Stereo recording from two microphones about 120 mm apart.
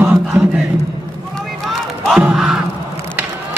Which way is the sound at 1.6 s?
5° right (ahead or behind).